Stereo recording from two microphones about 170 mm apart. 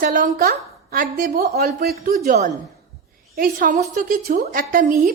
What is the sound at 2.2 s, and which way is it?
A woman's voice, 50° right (ahead or behind).